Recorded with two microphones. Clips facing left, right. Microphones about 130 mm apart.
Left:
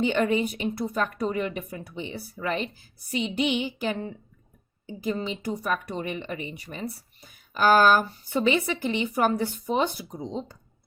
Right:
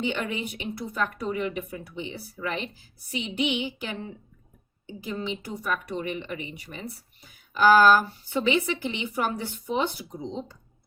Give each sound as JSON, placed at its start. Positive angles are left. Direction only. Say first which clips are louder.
{"t": 0.0, "sound": "speech", "louder": "left 6 dB", "side_deg": 45}